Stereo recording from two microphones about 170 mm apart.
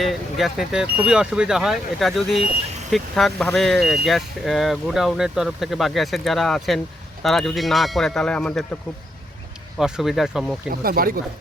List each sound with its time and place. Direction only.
0.0 s speech: centre (ahead or behind)
9.7 s speech: centre (ahead or behind)
10.7 s speech: 60° right (ahead or behind)